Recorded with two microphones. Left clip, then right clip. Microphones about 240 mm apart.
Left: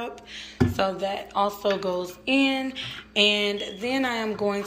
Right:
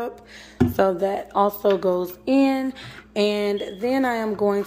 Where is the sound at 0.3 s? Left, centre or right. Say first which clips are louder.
Right 2 dB; right.